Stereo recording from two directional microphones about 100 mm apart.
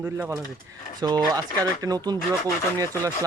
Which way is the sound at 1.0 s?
45° right (ahead or behind).